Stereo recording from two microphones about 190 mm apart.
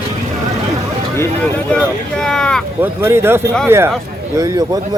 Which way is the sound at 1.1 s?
5° left (ahead or behind).